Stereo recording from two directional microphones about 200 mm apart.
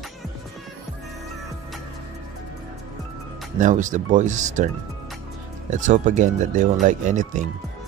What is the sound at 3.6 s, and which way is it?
Speech, 40° right (ahead or behind).